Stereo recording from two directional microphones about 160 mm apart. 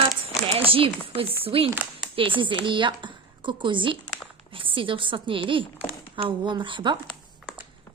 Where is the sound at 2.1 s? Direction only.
30° right (ahead or behind).